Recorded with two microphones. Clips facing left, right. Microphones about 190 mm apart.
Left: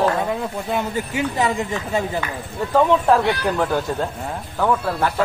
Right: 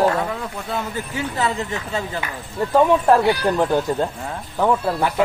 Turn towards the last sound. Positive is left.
turn(degrees=-15)  # may be behind; listen again after turning